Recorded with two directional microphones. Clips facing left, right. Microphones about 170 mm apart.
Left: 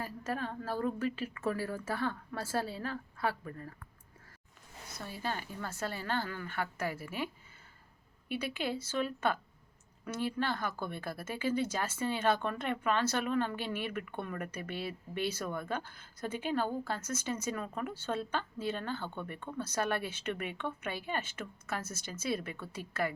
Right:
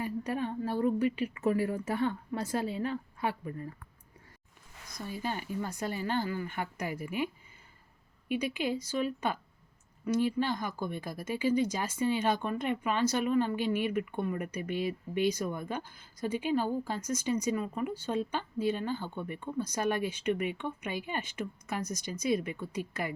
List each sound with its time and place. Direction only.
0.0 s speech: 15° right (ahead or behind)
5.2 s speech: 15° right (ahead or behind)
8.3 s speech: 15° right (ahead or behind)